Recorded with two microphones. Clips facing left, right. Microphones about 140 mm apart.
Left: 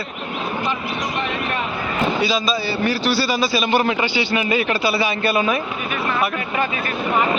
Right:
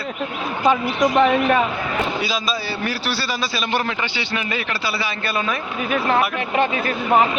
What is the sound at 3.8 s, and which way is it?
A man's voice, 25° left (ahead or behind).